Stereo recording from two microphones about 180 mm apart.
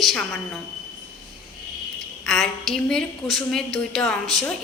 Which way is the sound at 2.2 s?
Centre (ahead or behind).